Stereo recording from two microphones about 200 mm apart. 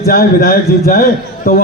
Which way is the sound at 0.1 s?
50° left (ahead or behind).